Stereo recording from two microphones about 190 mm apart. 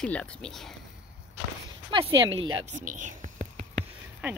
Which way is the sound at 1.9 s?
25° right (ahead or behind).